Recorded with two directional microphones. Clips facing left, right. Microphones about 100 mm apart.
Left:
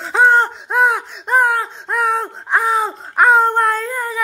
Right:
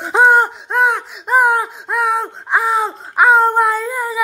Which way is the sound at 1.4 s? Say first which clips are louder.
Right 2 dB; 15° right (ahead or behind).